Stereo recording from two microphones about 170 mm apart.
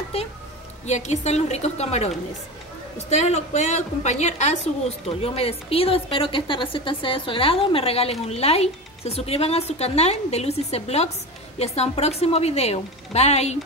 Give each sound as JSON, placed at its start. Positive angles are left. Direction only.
{"t": 0.8, "sound": "a woman's voice", "side_deg": 40}